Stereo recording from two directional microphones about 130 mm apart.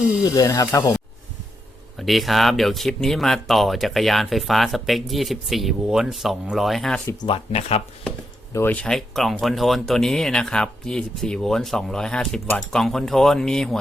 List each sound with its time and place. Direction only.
0.3 s speech: 30° left (ahead or behind)
2.0 s speech: centre (ahead or behind)
7.3 s speech: 45° left (ahead or behind)
8.5 s speech: 15° left (ahead or behind)